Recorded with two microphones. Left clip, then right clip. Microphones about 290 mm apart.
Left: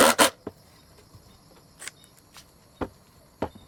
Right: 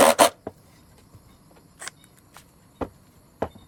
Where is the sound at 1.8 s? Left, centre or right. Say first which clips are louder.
Right 3 dB; centre.